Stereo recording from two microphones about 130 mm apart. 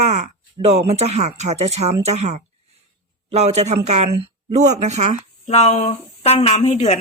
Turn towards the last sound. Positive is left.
turn(degrees=60)  # may be behind; listen again after turning